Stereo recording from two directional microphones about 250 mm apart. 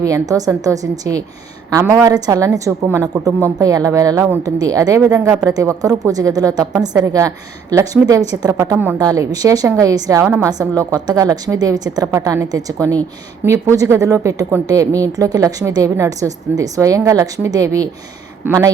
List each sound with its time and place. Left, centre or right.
0.0 s a woman's voice: centre